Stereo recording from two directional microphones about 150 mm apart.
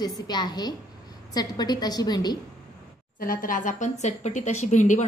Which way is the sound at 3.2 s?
70° left (ahead or behind).